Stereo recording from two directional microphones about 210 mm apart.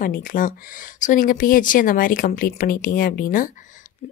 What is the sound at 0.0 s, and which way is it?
A woman's voice, 40° left (ahead or behind).